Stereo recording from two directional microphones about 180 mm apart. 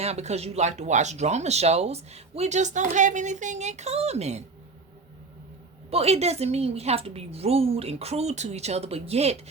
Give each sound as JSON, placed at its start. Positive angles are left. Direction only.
{"t": 0.0, "sound": "speech", "side_deg": -35}
{"t": 5.9, "sound": "speech", "side_deg": -35}